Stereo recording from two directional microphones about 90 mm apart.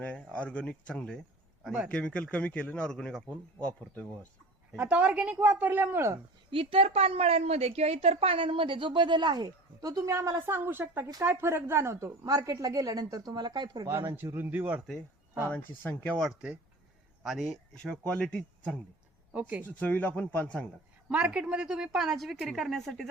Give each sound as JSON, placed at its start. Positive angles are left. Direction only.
{"t": 0.0, "sound": "a man's voice", "side_deg": 15}
{"t": 4.8, "sound": "speech", "side_deg": -15}
{"t": 6.5, "sound": "a woman's voice", "side_deg": -90}
{"t": 13.8, "sound": "speech", "side_deg": -30}
{"t": 15.4, "sound": "speech", "side_deg": 20}
{"t": 16.0, "sound": "a man's voice", "side_deg": 5}
{"t": 19.3, "sound": "speech", "side_deg": -15}
{"t": 19.6, "sound": "a man's voice", "side_deg": 20}
{"t": 21.1, "sound": "speech", "side_deg": -15}